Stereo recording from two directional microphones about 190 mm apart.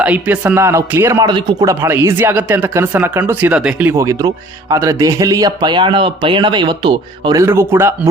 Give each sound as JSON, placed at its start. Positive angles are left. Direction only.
{"t": 0.0, "sound": "a man's voice", "side_deg": -5}